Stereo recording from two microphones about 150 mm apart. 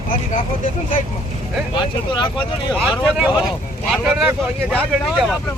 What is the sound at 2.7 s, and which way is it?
Speech, 5° right (ahead or behind).